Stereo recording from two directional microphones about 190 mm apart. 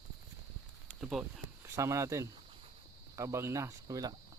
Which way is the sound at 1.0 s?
5° right (ahead or behind).